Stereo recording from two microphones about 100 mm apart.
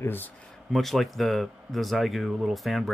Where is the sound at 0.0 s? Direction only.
20° left (ahead or behind).